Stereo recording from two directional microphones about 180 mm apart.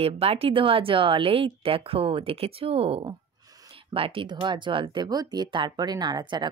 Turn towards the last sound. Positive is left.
turn(degrees=-25)  # may be behind; listen again after turning